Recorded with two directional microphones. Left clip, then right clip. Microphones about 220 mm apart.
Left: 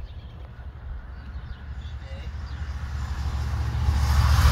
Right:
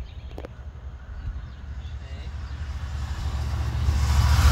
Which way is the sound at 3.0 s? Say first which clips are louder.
Even; 30° right (ahead or behind).